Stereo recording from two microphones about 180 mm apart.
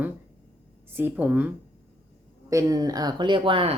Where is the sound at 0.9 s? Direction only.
10° right (ahead or behind).